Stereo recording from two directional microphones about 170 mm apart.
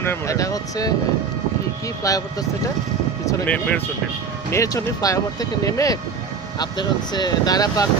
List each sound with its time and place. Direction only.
0.0 s speech: 15° left (ahead or behind)
2.0 s speech: 20° left (ahead or behind)
3.2 s speech: 15° left (ahead or behind)
4.5 s speech: 20° left (ahead or behind)